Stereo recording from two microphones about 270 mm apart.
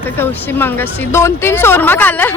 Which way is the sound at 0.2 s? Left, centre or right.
Centre.